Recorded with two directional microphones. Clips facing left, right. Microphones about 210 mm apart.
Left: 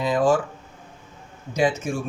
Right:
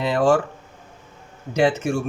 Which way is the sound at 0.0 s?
70° right (ahead or behind).